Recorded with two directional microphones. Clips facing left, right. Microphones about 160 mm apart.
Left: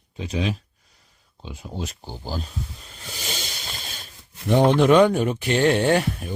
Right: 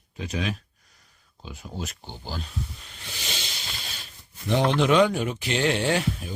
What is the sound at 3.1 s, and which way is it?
Snake, 40° left (ahead or behind).